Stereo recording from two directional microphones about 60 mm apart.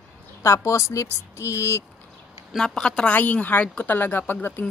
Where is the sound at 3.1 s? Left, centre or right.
Left.